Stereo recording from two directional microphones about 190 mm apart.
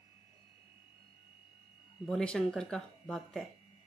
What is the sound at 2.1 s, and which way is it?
Speech, 5° left (ahead or behind).